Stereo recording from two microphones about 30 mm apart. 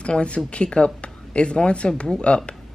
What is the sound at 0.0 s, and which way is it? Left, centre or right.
A woman's voice, left.